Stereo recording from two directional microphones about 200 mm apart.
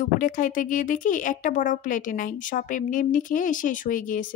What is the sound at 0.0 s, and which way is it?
Speech, 40° left (ahead or behind).